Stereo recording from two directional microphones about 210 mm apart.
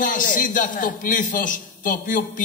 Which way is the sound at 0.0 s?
40° left (ahead or behind).